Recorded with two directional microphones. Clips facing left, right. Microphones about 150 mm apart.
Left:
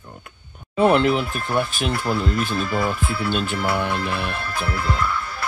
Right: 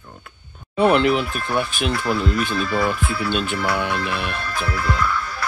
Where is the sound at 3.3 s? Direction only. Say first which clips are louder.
Even; 5° left (ahead or behind).